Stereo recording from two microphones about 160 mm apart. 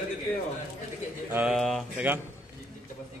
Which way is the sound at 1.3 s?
Centre (ahead or behind).